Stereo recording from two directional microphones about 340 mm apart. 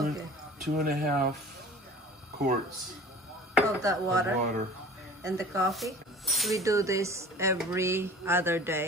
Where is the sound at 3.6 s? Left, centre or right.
Centre.